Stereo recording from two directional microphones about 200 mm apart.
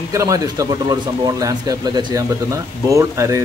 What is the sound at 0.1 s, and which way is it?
Speech, 15° right (ahead or behind).